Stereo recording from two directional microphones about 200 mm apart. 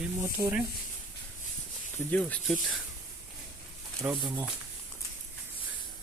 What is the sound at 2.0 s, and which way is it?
Speech, 5° left (ahead or behind).